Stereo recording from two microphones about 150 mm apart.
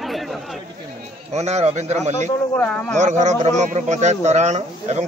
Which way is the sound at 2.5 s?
10° left (ahead or behind).